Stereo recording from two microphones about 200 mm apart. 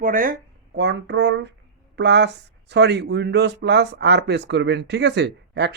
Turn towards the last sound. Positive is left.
turn(degrees=-60)  # may be behind; listen again after turning